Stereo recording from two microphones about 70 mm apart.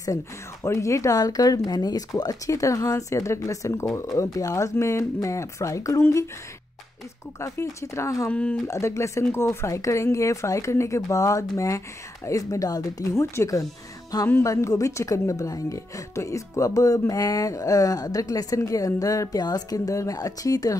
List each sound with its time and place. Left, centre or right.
0.7 s speech: left
7.3 s speech: left
8.3 s speech: centre
8.6 s speech: left
13.2 s speech: left